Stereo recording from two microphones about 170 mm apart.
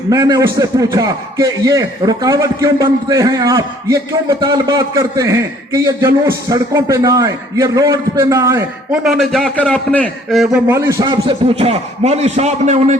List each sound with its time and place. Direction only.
0.1 s a man's voice: 20° right (ahead or behind)
8.9 s a man's voice: centre (ahead or behind); by 11.0 s 15° right (ahead or behind)
11.0 s a man's voice: 30° right (ahead or behind)